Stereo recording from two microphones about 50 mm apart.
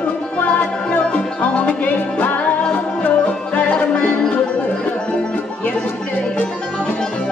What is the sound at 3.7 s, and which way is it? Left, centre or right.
Music, left.